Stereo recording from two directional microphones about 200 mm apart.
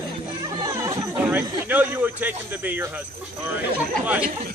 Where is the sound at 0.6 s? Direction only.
15° right (ahead or behind).